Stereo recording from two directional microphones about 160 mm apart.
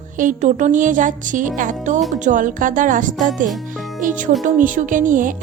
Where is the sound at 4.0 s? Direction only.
55° right (ahead or behind).